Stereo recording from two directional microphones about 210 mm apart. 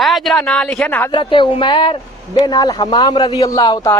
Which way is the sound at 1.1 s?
20° left (ahead or behind).